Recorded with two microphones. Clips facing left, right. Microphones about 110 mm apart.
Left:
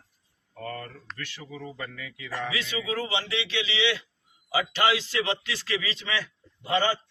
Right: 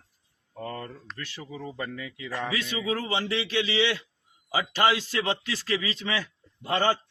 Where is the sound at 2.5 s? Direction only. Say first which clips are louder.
Right 1 dB; 40° right (ahead or behind).